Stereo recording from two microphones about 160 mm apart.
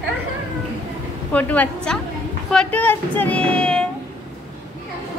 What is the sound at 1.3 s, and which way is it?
Speech, 10° left (ahead or behind).